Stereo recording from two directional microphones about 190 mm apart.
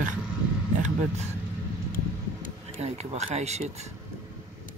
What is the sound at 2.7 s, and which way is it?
Speech, 35° right (ahead or behind).